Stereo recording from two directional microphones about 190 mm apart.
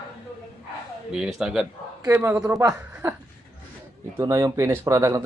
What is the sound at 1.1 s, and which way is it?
Speech, centre (ahead or behind).